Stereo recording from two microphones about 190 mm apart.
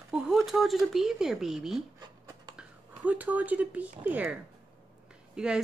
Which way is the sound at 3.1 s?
10° right (ahead or behind).